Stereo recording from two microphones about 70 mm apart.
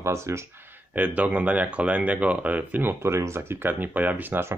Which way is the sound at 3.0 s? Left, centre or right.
Right.